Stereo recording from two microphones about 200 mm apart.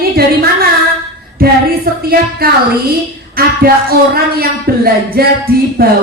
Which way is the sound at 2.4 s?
50° right (ahead or behind).